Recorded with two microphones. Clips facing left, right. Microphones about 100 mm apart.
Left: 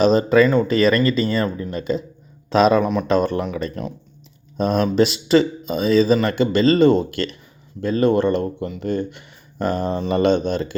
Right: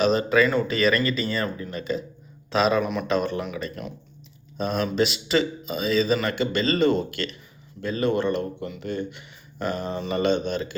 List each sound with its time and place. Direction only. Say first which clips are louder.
0.0 s speech: left 5 dB; 35° left (ahead or behind)
3.1 s speech: left 7 dB; 45° left (ahead or behind)
4.5 s speech: left 6 dB; 45° left (ahead or behind)